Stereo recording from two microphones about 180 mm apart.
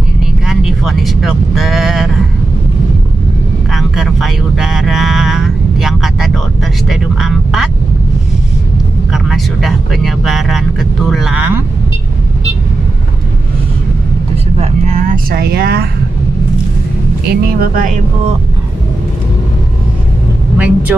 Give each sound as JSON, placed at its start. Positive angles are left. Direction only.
{"t": 0.5, "sound": "speech", "side_deg": 0}
{"t": 3.7, "sound": "speech", "side_deg": 0}
{"t": 9.1, "sound": "speech", "side_deg": 0}
{"t": 15.0, "sound": "speech", "side_deg": -55}
{"t": 17.3, "sound": "speech", "side_deg": -55}
{"t": 20.5, "sound": "speech", "side_deg": -10}